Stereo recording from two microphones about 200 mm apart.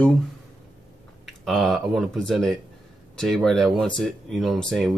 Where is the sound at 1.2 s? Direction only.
Centre (ahead or behind).